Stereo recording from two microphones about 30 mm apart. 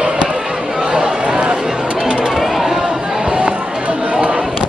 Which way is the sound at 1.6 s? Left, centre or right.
Right.